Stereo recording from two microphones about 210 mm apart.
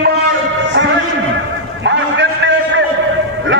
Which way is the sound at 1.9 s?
60° right (ahead or behind).